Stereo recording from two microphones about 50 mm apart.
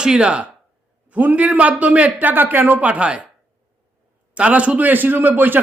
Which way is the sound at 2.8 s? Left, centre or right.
Right.